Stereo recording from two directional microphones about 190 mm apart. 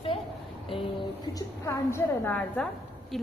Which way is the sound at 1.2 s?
20° left (ahead or behind).